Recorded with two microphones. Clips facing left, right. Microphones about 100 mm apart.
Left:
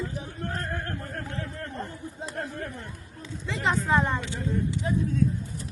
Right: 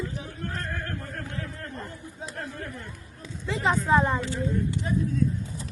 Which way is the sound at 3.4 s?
5° right (ahead or behind).